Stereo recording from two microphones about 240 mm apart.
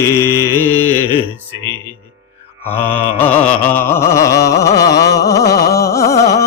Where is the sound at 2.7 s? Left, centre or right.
Centre.